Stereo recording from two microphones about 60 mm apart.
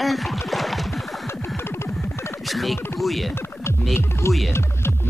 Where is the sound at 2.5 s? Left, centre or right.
Centre.